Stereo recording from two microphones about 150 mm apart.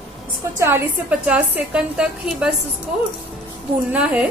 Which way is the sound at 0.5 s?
15° right (ahead or behind).